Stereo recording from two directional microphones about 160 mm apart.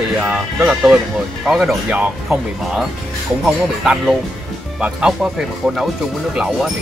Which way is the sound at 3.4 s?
5° right (ahead or behind).